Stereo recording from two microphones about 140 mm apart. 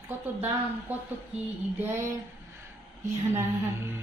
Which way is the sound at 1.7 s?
15° right (ahead or behind).